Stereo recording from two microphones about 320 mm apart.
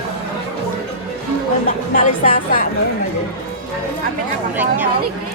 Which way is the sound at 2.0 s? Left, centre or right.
Left.